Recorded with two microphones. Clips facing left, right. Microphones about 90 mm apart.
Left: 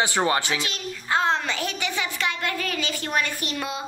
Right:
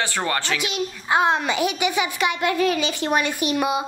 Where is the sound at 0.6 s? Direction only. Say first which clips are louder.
Right 5 dB; 15° right (ahead or behind).